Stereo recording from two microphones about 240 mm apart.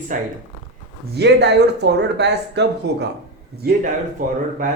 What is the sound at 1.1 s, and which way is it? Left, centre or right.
Speech, right.